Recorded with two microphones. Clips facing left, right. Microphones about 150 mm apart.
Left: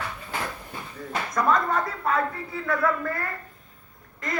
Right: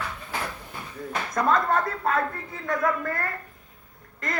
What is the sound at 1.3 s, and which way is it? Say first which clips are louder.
Speech: right 1 dB; 55° right (ahead or behind).